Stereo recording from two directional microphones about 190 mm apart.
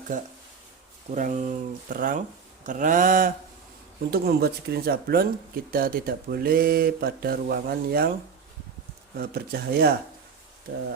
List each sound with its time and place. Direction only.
0.1 s speech: 40° right (ahead or behind)
4.1 s speech: 55° right (ahead or behind)
9.1 s speech: 55° right (ahead or behind)